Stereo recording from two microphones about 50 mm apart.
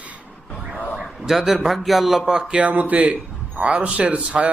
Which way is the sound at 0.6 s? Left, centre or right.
Right.